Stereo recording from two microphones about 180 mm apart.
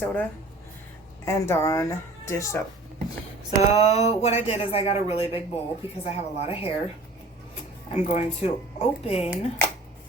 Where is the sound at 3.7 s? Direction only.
40° left (ahead or behind).